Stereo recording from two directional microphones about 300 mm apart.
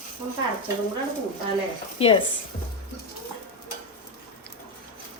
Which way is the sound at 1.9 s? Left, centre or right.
Centre.